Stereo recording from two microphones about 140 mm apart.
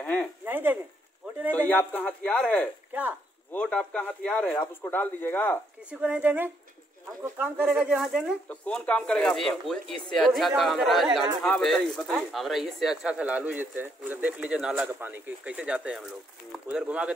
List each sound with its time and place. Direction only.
0.0 s a sound: 5° left (ahead or behind)
0.5 s speech: 15° right (ahead or behind)
1.5 s speech: 10° left (ahead or behind)
2.9 s a sound: 15° right (ahead or behind)
3.5 s speech: 10° left (ahead or behind)
5.9 s speech: 10° right (ahead or behind)
8.5 s speech: 10° left (ahead or behind); by 17.1 s 10° right (ahead or behind)